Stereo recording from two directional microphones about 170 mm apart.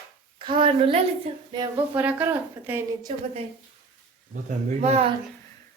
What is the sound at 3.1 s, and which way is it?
Speech, 30° right (ahead or behind).